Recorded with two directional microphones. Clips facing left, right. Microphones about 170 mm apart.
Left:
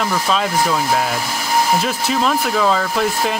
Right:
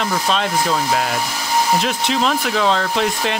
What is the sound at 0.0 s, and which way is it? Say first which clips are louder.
Speech: left 1 dB; 5° left (ahead or behind).